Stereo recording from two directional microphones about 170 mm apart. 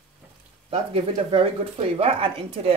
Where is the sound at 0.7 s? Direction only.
35° right (ahead or behind).